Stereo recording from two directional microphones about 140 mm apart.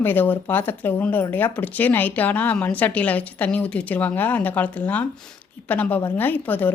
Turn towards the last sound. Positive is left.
turn(degrees=10)  # may be behind; listen again after turning